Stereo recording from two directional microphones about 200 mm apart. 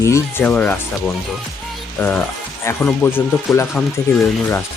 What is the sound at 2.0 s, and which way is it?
Speech, 10° left (ahead or behind).